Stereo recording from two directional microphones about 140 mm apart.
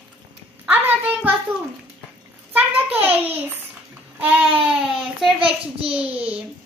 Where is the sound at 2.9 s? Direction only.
15° right (ahead or behind).